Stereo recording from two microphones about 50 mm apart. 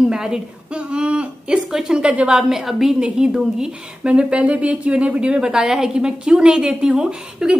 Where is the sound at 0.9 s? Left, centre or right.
Centre.